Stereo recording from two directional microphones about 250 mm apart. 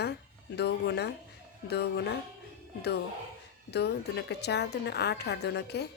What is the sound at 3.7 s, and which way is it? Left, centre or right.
A woman's voice, left.